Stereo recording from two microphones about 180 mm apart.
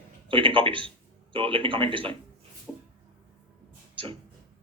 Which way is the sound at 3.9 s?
30° right (ahead or behind).